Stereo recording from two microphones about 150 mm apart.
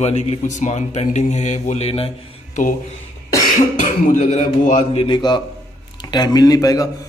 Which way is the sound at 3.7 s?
55° left (ahead or behind).